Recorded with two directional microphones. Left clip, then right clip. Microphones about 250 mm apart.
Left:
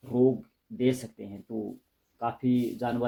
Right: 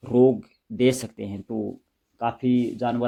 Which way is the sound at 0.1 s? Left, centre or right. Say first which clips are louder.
Right 7 dB; right.